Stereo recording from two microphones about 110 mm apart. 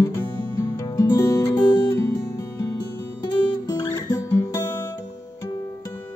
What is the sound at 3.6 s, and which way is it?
Guitar, 30° left (ahead or behind).